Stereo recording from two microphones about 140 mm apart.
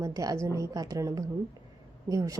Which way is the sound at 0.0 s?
25° right (ahead or behind).